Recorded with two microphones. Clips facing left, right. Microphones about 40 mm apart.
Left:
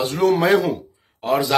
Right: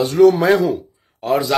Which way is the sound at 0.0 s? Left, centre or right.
Left.